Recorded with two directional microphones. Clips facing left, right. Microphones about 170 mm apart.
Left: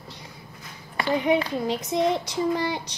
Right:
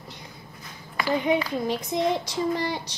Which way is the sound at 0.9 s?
20° left (ahead or behind).